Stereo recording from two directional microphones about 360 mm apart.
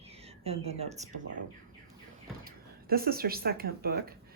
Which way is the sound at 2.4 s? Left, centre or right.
Right.